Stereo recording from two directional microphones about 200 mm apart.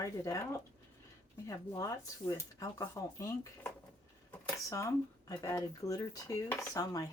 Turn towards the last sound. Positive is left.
turn(degrees=15)  # may be behind; listen again after turning